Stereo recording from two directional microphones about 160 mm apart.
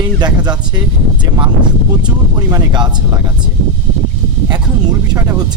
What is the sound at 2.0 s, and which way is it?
Speech, 20° right (ahead or behind).